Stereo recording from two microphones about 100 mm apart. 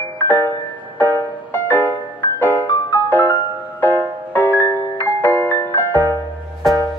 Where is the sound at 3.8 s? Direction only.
20° left (ahead or behind).